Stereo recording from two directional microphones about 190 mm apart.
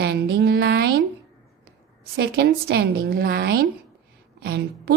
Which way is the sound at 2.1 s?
55° right (ahead or behind).